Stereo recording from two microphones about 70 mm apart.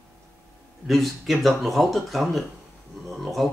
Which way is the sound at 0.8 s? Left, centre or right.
Centre.